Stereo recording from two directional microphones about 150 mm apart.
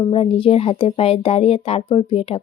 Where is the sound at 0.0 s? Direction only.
35° left (ahead or behind).